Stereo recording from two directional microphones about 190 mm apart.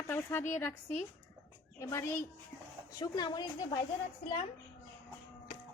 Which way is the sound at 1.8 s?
15° left (ahead or behind).